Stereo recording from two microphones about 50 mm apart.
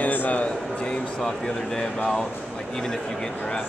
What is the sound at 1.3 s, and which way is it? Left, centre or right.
Speech, centre.